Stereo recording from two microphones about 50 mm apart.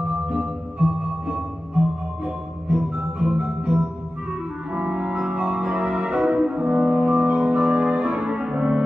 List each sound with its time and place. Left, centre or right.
0.3 s music: right
2.7 s music: centre